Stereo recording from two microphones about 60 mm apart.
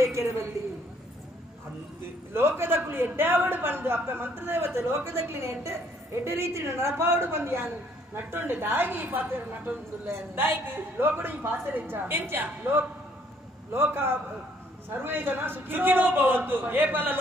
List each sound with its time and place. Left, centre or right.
2.3 s speech: right
10.0 s speech: right